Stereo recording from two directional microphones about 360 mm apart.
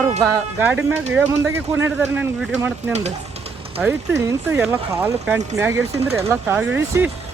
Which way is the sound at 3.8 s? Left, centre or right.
Centre.